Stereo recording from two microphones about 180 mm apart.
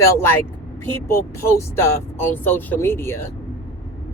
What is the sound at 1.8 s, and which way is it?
Speech, 10° left (ahead or behind).